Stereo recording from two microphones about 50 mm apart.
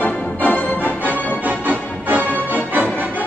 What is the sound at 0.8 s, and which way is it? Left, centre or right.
Music, right.